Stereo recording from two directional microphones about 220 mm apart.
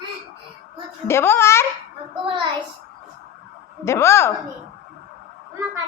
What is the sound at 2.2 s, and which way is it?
Speech, 25° right (ahead or behind).